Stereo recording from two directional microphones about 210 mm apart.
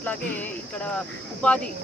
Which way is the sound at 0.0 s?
10° left (ahead or behind).